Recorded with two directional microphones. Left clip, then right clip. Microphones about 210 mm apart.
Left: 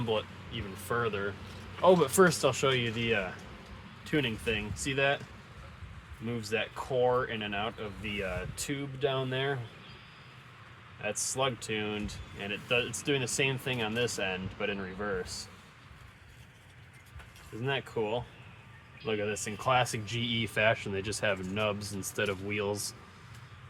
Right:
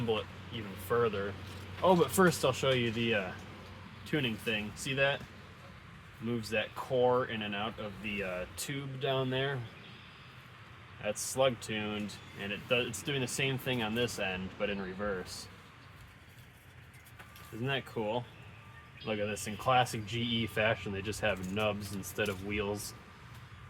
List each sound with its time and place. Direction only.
0.9 s speech: 40° left (ahead or behind)
6.4 s speech: 25° left (ahead or behind)
11.0 s speech: 25° left (ahead or behind)
17.7 s speech: 25° left (ahead or behind)